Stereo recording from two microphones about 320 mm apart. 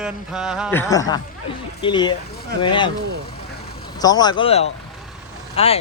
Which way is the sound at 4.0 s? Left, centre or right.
Centre.